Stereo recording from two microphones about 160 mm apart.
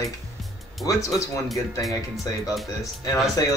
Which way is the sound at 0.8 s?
20° left (ahead or behind).